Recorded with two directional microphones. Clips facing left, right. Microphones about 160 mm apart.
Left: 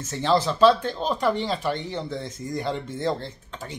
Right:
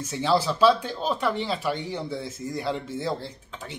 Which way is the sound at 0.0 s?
10° right (ahead or behind).